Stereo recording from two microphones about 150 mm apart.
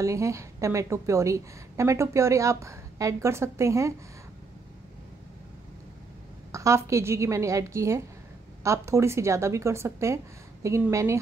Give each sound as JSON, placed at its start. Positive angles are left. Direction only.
{"t": 0.0, "sound": "a woman's voice", "side_deg": -20}
{"t": 6.5, "sound": "a woman's voice", "side_deg": -20}